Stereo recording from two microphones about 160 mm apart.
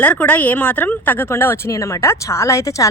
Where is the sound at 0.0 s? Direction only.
10° left (ahead or behind).